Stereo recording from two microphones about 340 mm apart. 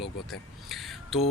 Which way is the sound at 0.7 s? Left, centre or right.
Centre.